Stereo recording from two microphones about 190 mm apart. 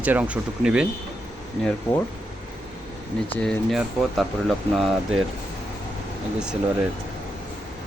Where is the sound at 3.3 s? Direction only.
5° left (ahead or behind).